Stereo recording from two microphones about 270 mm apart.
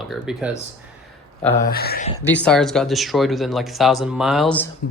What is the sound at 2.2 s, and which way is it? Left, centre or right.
Speech, centre.